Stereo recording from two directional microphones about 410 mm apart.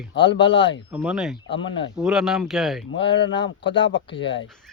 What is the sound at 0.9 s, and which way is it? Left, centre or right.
Speech, centre.